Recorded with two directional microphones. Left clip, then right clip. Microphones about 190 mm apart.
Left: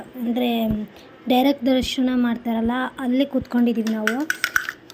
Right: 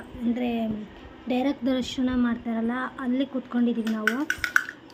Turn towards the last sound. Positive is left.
turn(degrees=60)  # may be behind; listen again after turning